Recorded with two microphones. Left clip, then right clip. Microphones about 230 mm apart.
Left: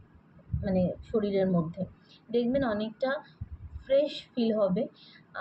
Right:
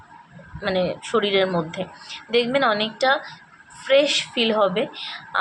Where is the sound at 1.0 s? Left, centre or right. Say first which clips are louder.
Right 10 dB; centre.